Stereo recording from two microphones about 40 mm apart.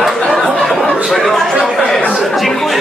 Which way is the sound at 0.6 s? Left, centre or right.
Centre.